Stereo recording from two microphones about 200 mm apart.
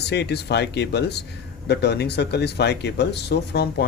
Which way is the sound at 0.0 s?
55° left (ahead or behind).